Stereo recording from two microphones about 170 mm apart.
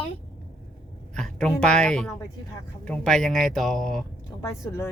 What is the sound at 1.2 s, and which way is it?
Speech, 5° left (ahead or behind).